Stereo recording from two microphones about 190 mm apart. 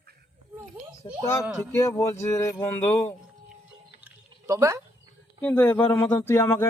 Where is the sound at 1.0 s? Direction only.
25° left (ahead or behind).